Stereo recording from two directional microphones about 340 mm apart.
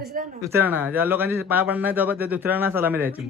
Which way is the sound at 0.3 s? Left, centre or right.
Centre.